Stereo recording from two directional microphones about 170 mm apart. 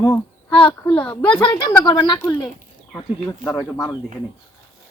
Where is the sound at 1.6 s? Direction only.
25° left (ahead or behind).